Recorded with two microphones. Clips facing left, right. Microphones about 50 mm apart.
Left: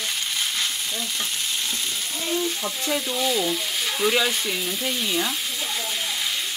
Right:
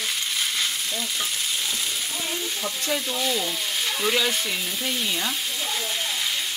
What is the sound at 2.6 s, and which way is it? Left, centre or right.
Frying, centre.